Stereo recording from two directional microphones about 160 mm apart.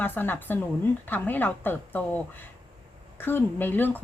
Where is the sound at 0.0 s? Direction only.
10° left (ahead or behind).